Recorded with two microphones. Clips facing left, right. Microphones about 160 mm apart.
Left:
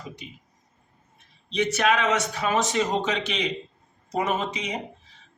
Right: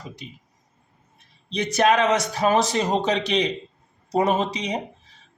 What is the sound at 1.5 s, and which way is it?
A man's voice, 35° right (ahead or behind).